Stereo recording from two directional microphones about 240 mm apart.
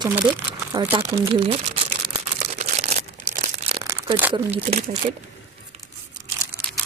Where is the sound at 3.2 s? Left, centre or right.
Right.